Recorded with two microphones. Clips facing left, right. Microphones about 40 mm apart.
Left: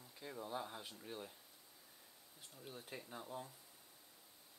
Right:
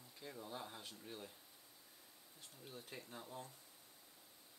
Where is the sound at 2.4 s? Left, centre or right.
Centre.